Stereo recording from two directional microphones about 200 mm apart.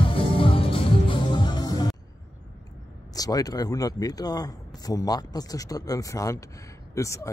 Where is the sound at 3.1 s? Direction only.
20° left (ahead or behind).